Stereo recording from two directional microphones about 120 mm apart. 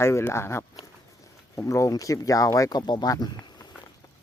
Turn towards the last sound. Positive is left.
turn(degrees=30)  # may be behind; listen again after turning